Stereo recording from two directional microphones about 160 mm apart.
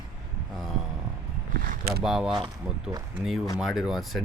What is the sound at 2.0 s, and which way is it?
Speech, 5° right (ahead or behind).